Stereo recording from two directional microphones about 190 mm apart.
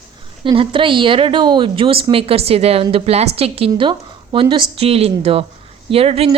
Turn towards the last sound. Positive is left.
turn(degrees=-30)  # may be behind; listen again after turning